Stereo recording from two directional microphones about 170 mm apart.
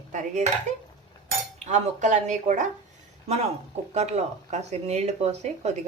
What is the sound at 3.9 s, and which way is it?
Speech, 40° right (ahead or behind).